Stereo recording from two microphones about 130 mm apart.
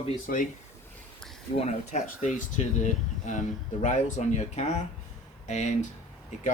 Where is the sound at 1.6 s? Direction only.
60° left (ahead or behind).